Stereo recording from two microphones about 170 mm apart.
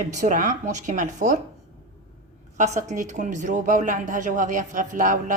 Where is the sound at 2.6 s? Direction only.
45° right (ahead or behind).